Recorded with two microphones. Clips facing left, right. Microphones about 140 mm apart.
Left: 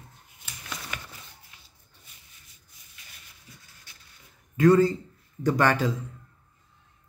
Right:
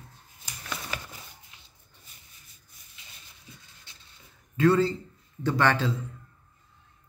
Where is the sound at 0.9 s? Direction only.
35° right (ahead or behind).